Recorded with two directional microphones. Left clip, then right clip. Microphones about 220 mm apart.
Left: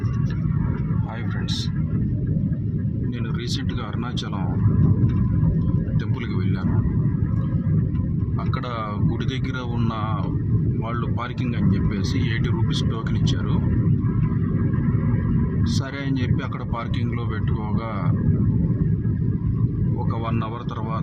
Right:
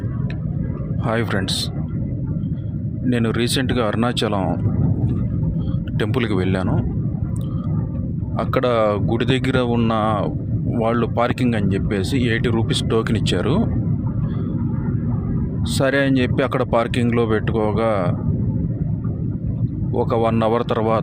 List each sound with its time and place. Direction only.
3.1 s speech: 45° right (ahead or behind)
6.1 s speech: 40° right (ahead or behind)
8.5 s speech: 40° right (ahead or behind)
15.8 s speech: 40° right (ahead or behind)
20.1 s speech: 40° right (ahead or behind)